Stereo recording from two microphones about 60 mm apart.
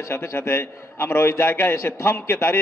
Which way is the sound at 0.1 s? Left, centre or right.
Left.